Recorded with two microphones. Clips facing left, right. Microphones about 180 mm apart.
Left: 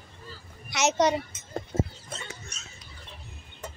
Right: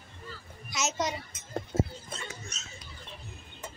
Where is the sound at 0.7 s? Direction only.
70° left (ahead or behind).